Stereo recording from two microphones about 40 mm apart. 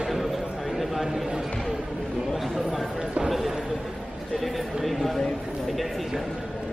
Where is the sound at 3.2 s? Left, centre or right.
Centre.